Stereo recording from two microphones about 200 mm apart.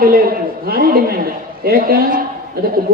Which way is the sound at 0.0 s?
50° right (ahead or behind).